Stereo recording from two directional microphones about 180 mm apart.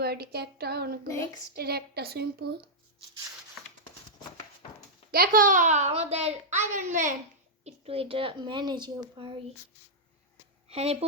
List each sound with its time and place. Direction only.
0.0 s a woman's voice: 60° right (ahead or behind)
1.0 s speech: 15° left (ahead or behind)
1.5 s a woman's voice: 60° right (ahead or behind)
5.1 s a child's voice: 55° right (ahead or behind)
7.6 s a woman's voice: 30° right (ahead or behind)
10.7 s speech: 35° right (ahead or behind)